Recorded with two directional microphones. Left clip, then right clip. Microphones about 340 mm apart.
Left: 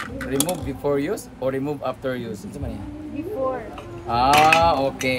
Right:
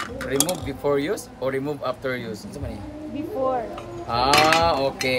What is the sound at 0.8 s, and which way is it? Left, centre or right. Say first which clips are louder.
Speech: even; centre.